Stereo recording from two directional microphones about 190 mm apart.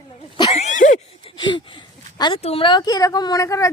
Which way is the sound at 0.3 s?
25° left (ahead or behind).